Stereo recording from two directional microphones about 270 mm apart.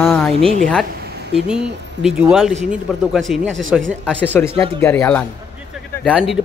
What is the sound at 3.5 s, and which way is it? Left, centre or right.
Speech, right.